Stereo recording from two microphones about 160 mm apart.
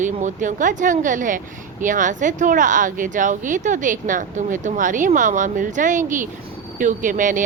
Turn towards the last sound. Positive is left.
turn(degrees=-55)  # may be behind; listen again after turning